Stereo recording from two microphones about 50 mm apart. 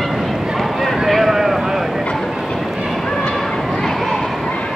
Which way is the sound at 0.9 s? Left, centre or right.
Centre.